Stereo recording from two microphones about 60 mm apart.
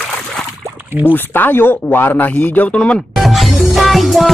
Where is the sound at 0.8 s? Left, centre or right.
Right.